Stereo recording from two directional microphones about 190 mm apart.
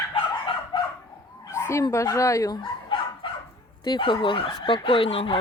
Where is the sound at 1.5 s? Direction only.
15° left (ahead or behind).